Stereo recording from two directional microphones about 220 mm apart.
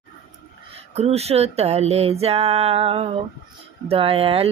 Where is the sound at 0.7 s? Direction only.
30° right (ahead or behind).